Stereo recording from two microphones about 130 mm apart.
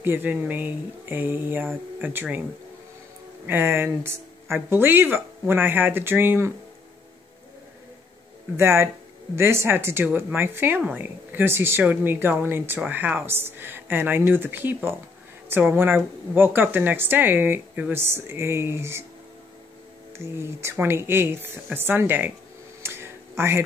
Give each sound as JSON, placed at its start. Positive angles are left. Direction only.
{"t": 0.0, "sound": "a woman's voice", "side_deg": -15}
{"t": 3.4, "sound": "a woman's voice", "side_deg": -15}
{"t": 8.5, "sound": "a woman's voice", "side_deg": -20}
{"t": 20.1, "sound": "a woman's voice", "side_deg": -20}
{"t": 22.8, "sound": "a sound", "side_deg": -20}